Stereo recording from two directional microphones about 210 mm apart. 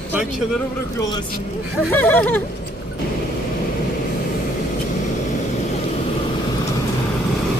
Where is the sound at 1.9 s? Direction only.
10° left (ahead or behind).